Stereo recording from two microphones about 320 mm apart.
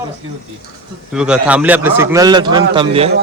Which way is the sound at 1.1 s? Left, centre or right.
Centre.